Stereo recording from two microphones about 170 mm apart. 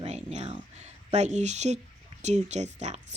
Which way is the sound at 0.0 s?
40° right (ahead or behind).